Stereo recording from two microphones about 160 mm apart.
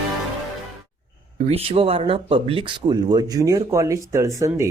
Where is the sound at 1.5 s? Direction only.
40° right (ahead or behind).